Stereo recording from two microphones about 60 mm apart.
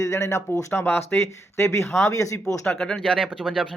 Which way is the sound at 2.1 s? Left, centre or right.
Left.